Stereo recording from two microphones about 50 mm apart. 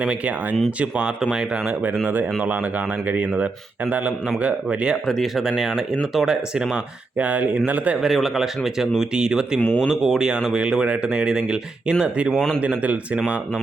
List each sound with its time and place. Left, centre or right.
0.0 s speech: centre
1.2 s speech: centre
1.6 s speech: right
5.0 s speech: centre
7.2 s speech: right
8.0 s speech: centre
9.6 s speech: left
9.9 s speech: centre; by 13.4 s right